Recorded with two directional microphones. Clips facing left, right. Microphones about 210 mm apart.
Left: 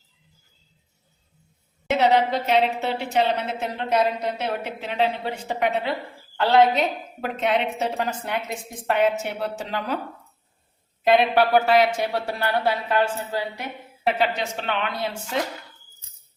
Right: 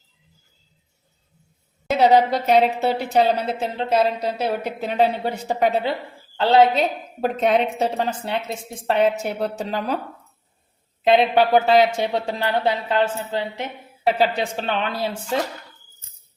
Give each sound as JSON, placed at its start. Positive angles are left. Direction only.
{"t": 2.0, "sound": "a woman's voice", "side_deg": -40}
{"t": 7.2, "sound": "a woman's voice", "side_deg": -40}
{"t": 11.0, "sound": "speech", "side_deg": -25}
{"t": 14.2, "sound": "a woman's voice", "side_deg": -35}